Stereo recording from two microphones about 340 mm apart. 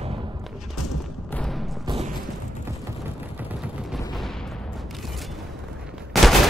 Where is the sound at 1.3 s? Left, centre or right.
Centre.